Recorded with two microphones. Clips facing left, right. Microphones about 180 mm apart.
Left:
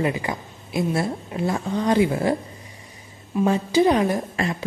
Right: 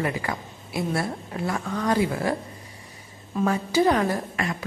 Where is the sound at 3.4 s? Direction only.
20° left (ahead or behind).